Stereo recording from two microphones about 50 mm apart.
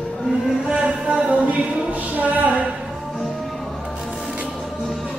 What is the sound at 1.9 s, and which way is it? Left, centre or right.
Speech, right.